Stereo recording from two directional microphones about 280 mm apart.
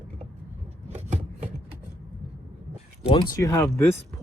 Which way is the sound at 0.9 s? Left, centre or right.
Right.